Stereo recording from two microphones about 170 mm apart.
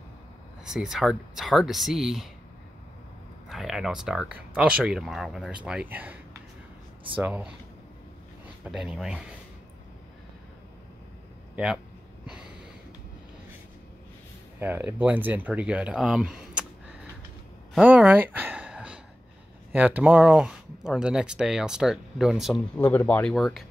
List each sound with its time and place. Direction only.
0.7 s speech: 5° right (ahead or behind)
3.4 s speech: centre (ahead or behind)
7.2 s speech: 5° right (ahead or behind)
8.6 s speech: 5° right (ahead or behind)
11.5 s speech: centre (ahead or behind)
14.6 s speech: 10° right (ahead or behind)
17.8 s a sound: 10° right (ahead or behind)
19.7 s speech: 10° right (ahead or behind)
22.8 s speech: 10° left (ahead or behind)